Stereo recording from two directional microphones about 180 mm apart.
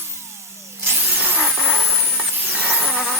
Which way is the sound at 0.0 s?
15° right (ahead or behind).